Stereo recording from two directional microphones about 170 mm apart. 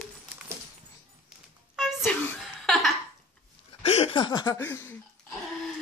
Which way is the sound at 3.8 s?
35° left (ahead or behind).